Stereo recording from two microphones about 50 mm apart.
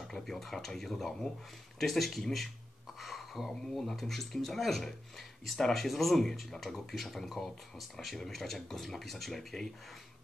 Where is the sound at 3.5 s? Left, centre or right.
Centre.